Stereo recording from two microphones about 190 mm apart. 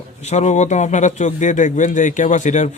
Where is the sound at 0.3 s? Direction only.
35° left (ahead or behind).